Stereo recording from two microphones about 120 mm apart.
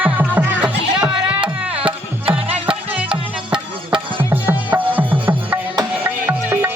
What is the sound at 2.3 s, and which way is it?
Music, 50° right (ahead or behind).